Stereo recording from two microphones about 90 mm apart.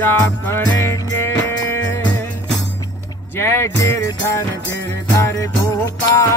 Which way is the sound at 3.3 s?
30° left (ahead or behind).